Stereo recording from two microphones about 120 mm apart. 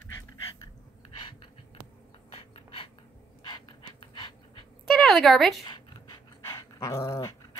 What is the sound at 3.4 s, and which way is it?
Pant, 40° left (ahead or behind).